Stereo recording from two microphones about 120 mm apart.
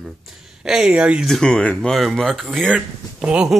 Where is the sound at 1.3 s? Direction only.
5° left (ahead or behind).